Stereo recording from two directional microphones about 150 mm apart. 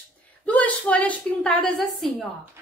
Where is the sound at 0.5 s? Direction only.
10° left (ahead or behind).